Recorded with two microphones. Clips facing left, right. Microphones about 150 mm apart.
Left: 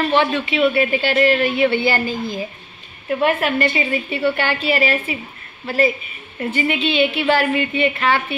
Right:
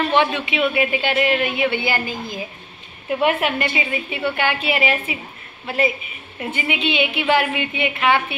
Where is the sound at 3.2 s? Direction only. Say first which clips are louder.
Left 2 dB; 15° right (ahead or behind).